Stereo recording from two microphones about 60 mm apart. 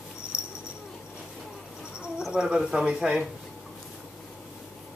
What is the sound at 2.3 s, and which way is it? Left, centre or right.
Speech, centre.